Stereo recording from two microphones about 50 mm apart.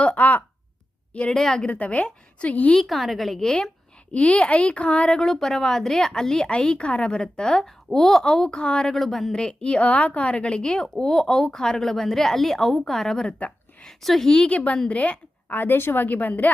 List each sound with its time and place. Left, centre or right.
0.0 s a sound: left
1.3 s a woman's voice: centre
1.6 s a woman's voice: left
2.7 s a woman's voice: centre
3.4 s a woman's voice: centre
5.2 s a woman's voice: centre
9.0 s a woman's voice: centre
14.3 s a woman's voice: centre
14.5 s a woman's voice: left
15.5 s speech: left
16.0 s speech: left